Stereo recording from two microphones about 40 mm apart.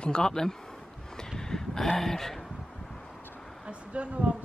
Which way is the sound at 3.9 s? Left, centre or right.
Right.